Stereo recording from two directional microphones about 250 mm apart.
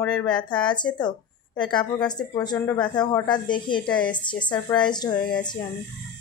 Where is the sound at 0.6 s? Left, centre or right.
Centre.